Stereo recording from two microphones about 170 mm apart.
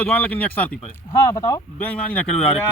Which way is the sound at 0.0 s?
10° left (ahead or behind).